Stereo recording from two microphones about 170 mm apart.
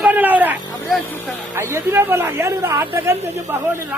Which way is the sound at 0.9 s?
Centre (ahead or behind).